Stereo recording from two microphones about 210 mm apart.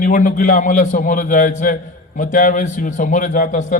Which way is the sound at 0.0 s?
40° left (ahead or behind).